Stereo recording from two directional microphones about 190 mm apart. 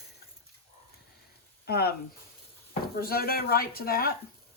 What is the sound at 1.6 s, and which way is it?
Speech, 55° left (ahead or behind).